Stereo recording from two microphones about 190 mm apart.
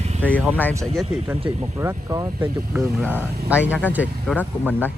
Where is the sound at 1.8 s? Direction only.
15° right (ahead or behind).